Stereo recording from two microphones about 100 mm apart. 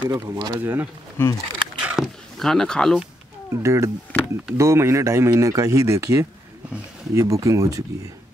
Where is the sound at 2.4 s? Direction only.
5° left (ahead or behind).